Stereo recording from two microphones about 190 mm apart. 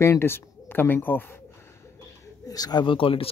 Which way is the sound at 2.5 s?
20° left (ahead or behind).